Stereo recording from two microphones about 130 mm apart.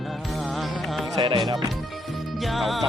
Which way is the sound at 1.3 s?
40° right (ahead or behind).